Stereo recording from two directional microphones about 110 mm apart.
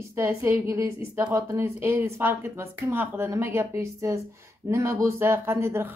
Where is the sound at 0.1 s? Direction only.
25° right (ahead or behind).